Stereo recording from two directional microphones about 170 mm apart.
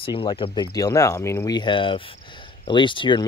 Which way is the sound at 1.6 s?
30° left (ahead or behind).